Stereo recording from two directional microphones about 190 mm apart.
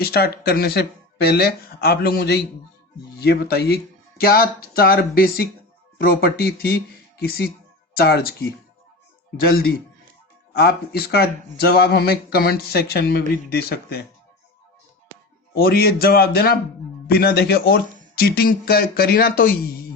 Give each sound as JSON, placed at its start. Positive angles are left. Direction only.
{"t": 0.0, "sound": "speech", "side_deg": 55}
{"t": 10.5, "sound": "speech", "side_deg": 55}
{"t": 15.5, "sound": "speech", "side_deg": 55}